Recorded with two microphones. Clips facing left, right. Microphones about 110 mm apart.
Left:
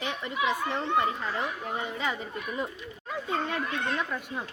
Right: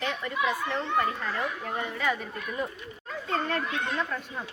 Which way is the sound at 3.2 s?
10° left (ahead or behind).